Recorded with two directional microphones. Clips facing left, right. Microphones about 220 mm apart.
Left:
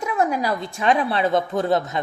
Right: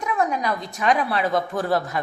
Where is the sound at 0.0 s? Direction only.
30° left (ahead or behind).